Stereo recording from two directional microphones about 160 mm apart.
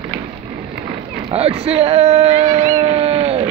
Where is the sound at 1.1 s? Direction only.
35° right (ahead or behind).